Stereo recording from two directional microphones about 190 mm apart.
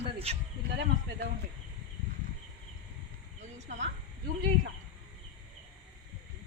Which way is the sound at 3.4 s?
40° right (ahead or behind).